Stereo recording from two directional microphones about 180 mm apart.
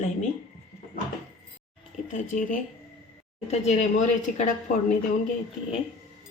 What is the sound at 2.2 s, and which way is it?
A woman's voice, 45° left (ahead or behind).